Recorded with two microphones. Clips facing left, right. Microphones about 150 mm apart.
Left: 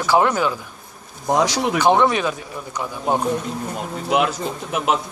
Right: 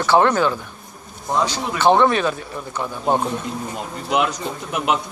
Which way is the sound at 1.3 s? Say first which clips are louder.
Left 3 dB; 85° left.